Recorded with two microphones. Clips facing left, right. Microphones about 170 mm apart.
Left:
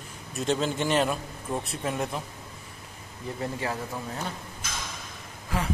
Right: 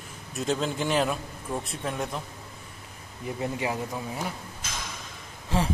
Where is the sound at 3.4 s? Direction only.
15° right (ahead or behind).